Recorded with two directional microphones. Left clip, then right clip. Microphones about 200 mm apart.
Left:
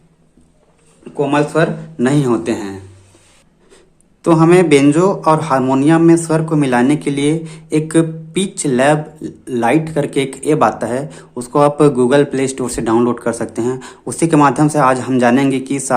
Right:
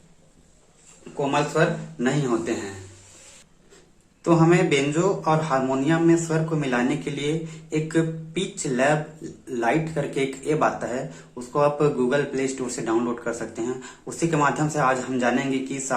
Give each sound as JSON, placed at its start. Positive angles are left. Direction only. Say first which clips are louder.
{"t": 1.2, "sound": "speech", "louder": "left 8 dB", "side_deg": 55}
{"t": 4.2, "sound": "speech", "louder": "left 9 dB", "side_deg": 50}